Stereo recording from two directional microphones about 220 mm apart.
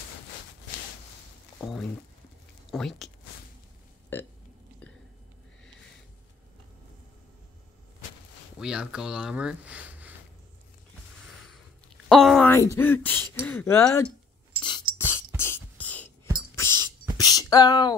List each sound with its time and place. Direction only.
1.6 s speech: centre (ahead or behind)
8.5 s speech: 5° right (ahead or behind)
12.1 s speech: centre (ahead or behind)
15.0 s beatboxing: 10° left (ahead or behind)
17.2 s a sound: 15° left (ahead or behind)